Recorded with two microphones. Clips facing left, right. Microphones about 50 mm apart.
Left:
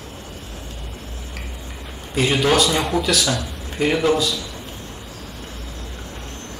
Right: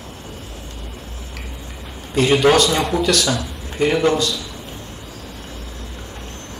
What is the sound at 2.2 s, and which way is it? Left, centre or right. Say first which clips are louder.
A man's voice: right 4 dB; centre.